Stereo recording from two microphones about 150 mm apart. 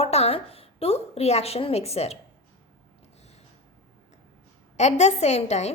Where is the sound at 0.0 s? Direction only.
45° left (ahead or behind).